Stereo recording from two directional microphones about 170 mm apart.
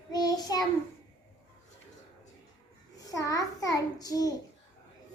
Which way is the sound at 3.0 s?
20° left (ahead or behind).